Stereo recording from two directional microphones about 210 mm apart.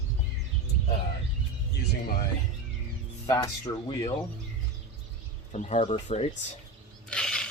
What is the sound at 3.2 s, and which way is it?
Speech, 20° left (ahead or behind).